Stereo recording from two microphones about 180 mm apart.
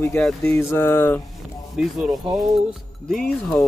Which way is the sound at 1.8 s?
5° right (ahead or behind).